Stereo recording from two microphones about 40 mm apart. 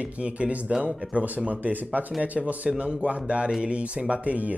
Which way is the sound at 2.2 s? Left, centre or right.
Right.